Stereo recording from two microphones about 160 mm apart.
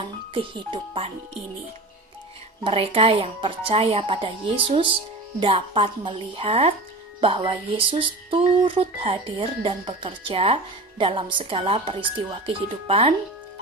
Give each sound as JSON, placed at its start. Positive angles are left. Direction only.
{"t": 0.0, "sound": "speech", "side_deg": -30}
{"t": 2.6, "sound": "speech", "side_deg": -35}